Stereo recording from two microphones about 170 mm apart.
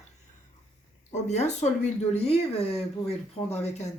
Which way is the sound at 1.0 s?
40° left (ahead or behind).